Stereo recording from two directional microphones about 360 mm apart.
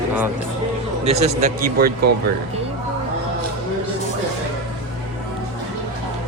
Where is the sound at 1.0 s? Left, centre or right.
Centre.